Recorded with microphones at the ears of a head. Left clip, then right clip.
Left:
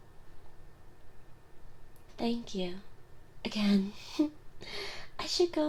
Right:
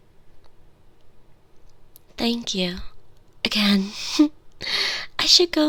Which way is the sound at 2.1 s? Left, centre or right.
Right.